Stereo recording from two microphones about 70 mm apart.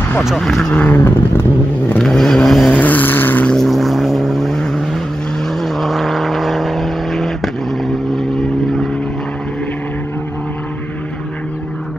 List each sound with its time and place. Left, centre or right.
0.2 s speech: centre
0.9 s vehicle: left
2.0 s vehicle: centre
2.7 s vehicle: left
3.5 s vehicle: centre